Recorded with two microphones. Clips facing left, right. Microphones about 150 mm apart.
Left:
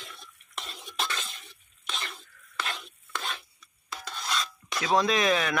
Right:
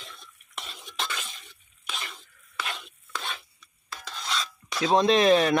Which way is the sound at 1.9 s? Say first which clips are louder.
Even; 10° right (ahead or behind).